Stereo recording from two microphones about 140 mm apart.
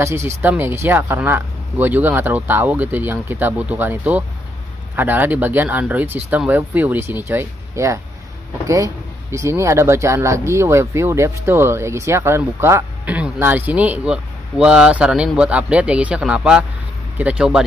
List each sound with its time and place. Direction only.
0.0 s speech: 20° right (ahead or behind)